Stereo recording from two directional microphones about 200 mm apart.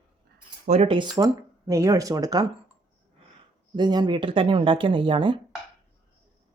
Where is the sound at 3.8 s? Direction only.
20° right (ahead or behind).